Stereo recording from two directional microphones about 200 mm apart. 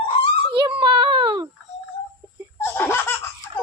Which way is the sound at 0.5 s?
25° right (ahead or behind).